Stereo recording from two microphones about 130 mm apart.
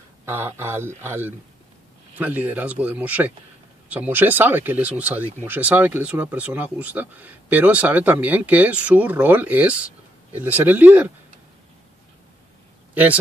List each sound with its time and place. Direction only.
0.2 s speech: 20° right (ahead or behind)
12.9 s a man's voice: 10° right (ahead or behind)